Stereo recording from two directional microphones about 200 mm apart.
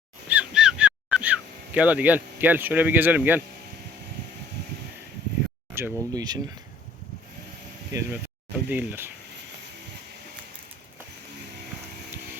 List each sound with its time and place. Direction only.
0.3 s a sound: 5° right (ahead or behind)
5.7 s speech: 15° right (ahead or behind)
8.1 s speech: 5° right (ahead or behind)